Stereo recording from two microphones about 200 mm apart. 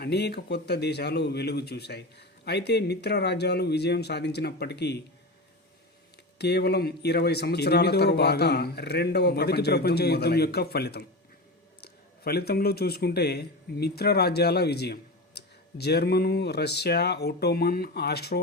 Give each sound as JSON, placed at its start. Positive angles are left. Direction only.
{"t": 0.0, "sound": "speech", "side_deg": 55}
{"t": 6.4, "sound": "speech", "side_deg": 55}